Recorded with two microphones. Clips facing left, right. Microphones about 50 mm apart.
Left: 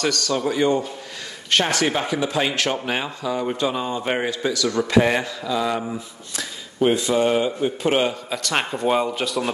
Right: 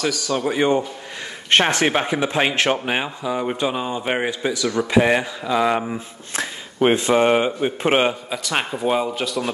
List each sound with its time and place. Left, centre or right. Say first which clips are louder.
0.0 s a man's voice: even; centre
0.3 s speech: right 2 dB; right
5.5 s mantra: right 4 dB; right
6.3 s speech: right 5 dB; right
8.3 s speech: even; centre